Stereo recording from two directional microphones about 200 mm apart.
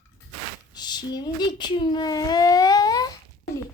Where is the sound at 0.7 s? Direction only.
20° left (ahead or behind).